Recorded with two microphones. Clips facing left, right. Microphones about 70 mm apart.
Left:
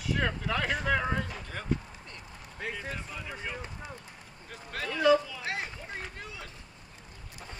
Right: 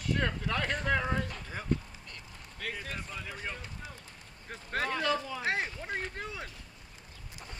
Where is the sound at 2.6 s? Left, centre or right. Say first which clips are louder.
Left 2 dB; left.